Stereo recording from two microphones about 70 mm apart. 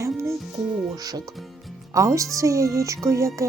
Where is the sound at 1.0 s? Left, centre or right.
Right.